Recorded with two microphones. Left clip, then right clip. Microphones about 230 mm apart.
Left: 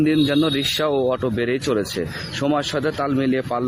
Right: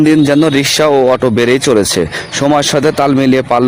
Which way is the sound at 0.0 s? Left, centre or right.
Right.